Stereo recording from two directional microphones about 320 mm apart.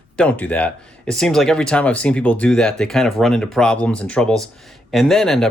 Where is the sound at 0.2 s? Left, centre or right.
Centre.